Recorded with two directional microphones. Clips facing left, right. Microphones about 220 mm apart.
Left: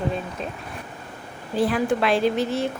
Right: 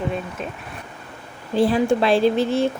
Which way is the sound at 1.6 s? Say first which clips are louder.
Right 4 dB; 25° right (ahead or behind).